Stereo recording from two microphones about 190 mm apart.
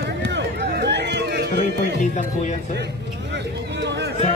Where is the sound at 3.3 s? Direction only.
65° right (ahead or behind).